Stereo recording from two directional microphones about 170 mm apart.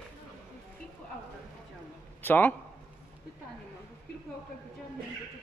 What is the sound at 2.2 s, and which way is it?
Speech, 10° left (ahead or behind).